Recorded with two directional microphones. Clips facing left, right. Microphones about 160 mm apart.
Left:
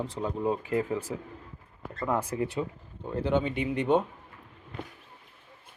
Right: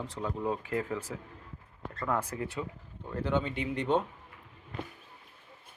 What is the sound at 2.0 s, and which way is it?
Speech, 25° left (ahead or behind).